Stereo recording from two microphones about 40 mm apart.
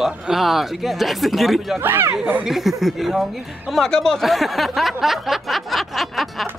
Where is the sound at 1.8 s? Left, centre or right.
Right.